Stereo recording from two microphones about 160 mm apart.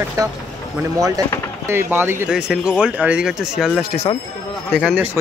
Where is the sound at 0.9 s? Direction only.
20° right (ahead or behind).